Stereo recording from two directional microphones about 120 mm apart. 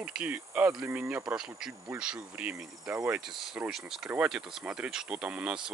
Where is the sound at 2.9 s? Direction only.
20° right (ahead or behind).